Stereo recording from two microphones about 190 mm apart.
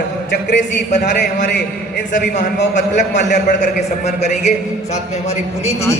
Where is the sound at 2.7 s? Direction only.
40° left (ahead or behind).